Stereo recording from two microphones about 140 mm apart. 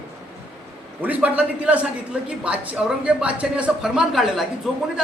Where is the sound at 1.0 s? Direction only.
10° right (ahead or behind).